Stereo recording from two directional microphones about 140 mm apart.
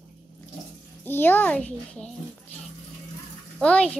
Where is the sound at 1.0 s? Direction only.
15° left (ahead or behind).